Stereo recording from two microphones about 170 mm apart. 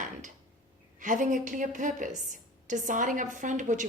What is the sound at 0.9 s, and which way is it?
A woman's voice, 50° right (ahead or behind).